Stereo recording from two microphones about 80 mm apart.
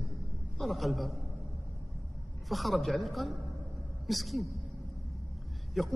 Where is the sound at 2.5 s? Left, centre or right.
Centre.